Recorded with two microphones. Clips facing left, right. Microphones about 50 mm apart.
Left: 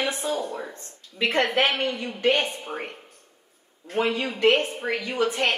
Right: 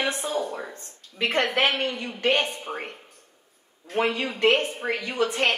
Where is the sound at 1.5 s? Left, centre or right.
Right.